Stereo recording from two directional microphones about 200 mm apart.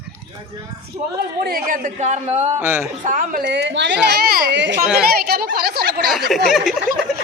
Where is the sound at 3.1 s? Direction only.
40° right (ahead or behind).